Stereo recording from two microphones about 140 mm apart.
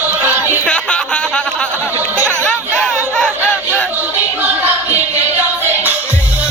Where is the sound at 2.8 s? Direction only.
5° left (ahead or behind).